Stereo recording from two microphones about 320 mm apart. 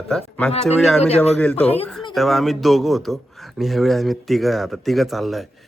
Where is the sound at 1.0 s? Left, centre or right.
Centre.